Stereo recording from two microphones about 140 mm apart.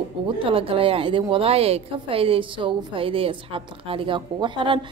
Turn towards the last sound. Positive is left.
turn(degrees=-35)  # may be behind; listen again after turning